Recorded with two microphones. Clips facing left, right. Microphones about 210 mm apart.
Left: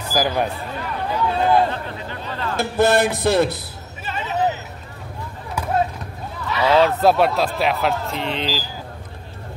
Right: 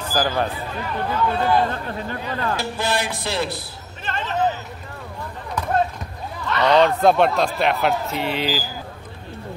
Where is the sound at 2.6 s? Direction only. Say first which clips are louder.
Left 7 dB; 50° left (ahead or behind).